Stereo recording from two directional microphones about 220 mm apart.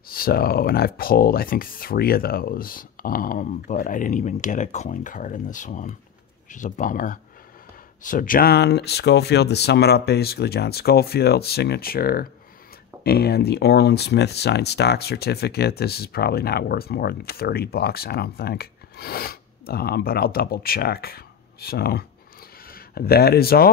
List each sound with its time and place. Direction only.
0.1 s speech: 45° left (ahead or behind)